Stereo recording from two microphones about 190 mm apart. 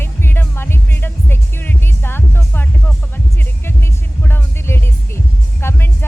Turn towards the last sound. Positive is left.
turn(degrees=15)  # may be behind; listen again after turning